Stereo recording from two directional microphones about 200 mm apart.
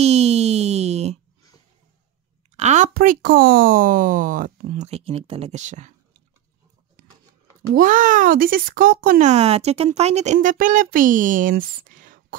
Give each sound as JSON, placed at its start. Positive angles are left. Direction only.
{"t": 0.0, "sound": "a sound", "side_deg": -30}
{"t": 2.5, "sound": "speech", "side_deg": -35}
{"t": 7.7, "sound": "speech", "side_deg": -40}